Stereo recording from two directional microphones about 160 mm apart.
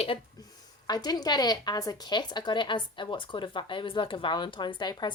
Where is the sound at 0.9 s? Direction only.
25° left (ahead or behind).